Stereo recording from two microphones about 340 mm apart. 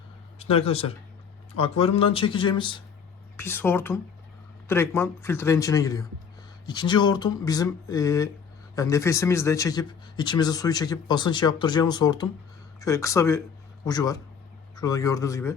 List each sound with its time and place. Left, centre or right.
0.3 s a man's voice: centre